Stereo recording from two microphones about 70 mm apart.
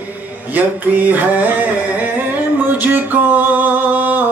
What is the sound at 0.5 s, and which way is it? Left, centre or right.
Music, right.